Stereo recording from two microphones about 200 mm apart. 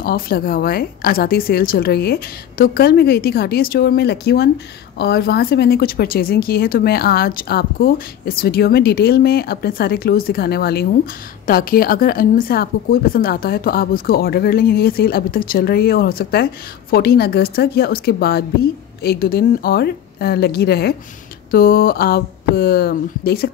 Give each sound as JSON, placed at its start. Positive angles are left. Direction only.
{"t": 0.0, "sound": "a woman's voice", "side_deg": 45}